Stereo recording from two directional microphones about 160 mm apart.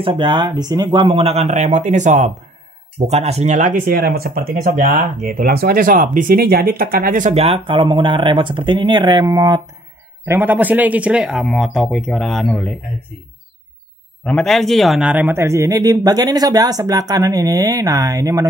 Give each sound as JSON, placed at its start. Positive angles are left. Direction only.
{"t": 0.0, "sound": "speech", "side_deg": -30}
{"t": 4.6, "sound": "speech", "side_deg": -55}
{"t": 10.2, "sound": "a man's voice", "side_deg": -15}
{"t": 14.2, "sound": "a man's voice", "side_deg": 5}